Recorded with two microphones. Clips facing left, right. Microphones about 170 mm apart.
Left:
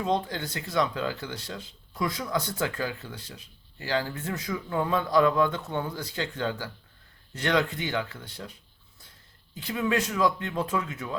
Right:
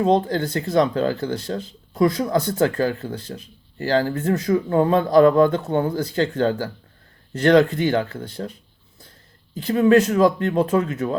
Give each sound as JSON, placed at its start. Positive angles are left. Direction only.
{"t": 0.0, "sound": "speech", "side_deg": -35}
{"t": 0.3, "sound": "speech", "side_deg": -50}
{"t": 9.6, "sound": "speech", "side_deg": -35}